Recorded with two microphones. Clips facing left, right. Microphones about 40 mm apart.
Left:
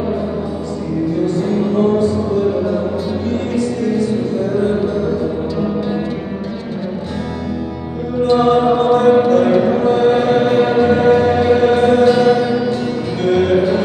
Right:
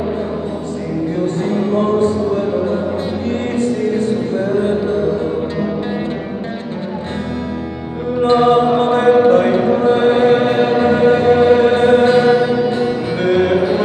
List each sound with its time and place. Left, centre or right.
1.2 s music: right
8.2 s chant: right; by 13.8 s centre